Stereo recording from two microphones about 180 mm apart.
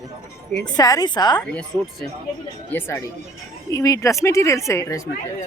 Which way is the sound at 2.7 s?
15° left (ahead or behind).